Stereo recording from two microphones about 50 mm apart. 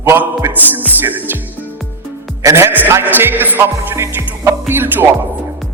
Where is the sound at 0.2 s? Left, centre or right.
Right.